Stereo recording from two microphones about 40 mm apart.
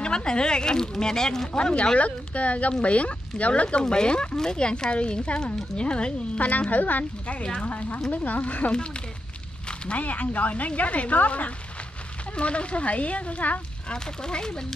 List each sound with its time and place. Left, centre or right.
0.0 s speech: left
1.5 s a woman's voice: left
6.7 s a woman's voice: left
13.8 s speech: left